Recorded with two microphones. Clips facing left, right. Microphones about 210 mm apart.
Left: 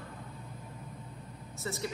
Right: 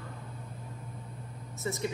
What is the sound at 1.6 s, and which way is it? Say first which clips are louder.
Speech: right 3 dB; 15° right (ahead or behind).